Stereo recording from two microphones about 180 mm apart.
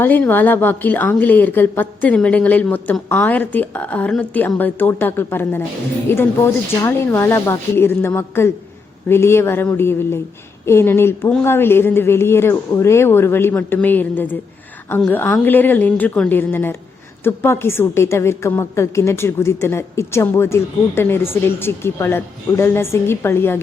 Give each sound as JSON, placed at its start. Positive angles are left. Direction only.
{"t": 0.0, "sound": "a woman's voice", "side_deg": 10}